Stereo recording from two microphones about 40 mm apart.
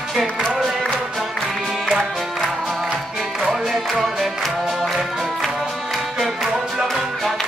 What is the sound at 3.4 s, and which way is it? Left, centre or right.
Music, centre.